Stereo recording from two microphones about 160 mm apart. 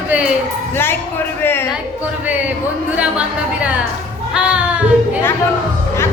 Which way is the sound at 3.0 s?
10° right (ahead or behind).